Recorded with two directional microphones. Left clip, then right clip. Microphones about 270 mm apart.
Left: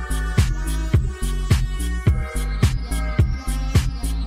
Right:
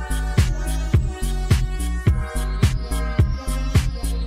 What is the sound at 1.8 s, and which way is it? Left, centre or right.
Music, centre.